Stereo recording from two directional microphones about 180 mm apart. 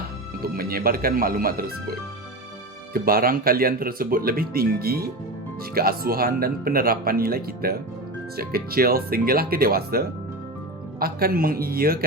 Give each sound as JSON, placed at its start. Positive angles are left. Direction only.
{"t": 0.4, "sound": "speech", "side_deg": -55}
{"t": 2.9, "sound": "speech", "side_deg": -55}
{"t": 11.0, "sound": "speech", "side_deg": -55}